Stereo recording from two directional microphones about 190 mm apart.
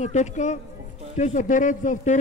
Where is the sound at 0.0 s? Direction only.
40° left (ahead or behind).